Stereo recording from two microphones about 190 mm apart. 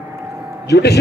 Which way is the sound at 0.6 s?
60° left (ahead or behind).